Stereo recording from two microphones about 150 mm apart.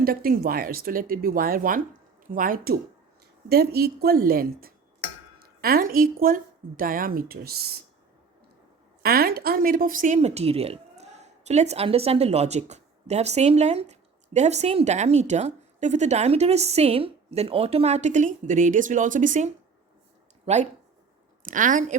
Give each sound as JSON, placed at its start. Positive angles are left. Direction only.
{"t": 0.0, "sound": "a woman's voice", "side_deg": -80}
{"t": 3.5, "sound": "a woman's voice", "side_deg": -90}
{"t": 9.0, "sound": "a woman's voice", "side_deg": -85}
{"t": 10.2, "sound": "a woman's voice", "side_deg": -45}
{"t": 20.4, "sound": "speech", "side_deg": -50}
{"t": 21.4, "sound": "a woman's voice", "side_deg": -60}